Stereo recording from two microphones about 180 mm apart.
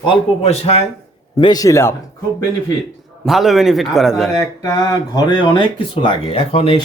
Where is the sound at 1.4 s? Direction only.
20° left (ahead or behind).